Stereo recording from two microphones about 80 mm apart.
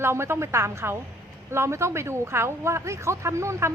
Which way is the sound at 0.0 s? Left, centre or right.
Right.